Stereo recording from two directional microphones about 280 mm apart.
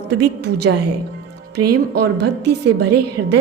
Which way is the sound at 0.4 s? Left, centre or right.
Right.